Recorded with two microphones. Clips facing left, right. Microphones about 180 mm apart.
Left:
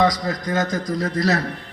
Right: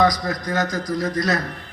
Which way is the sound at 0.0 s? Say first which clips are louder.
Even; 25° left (ahead or behind).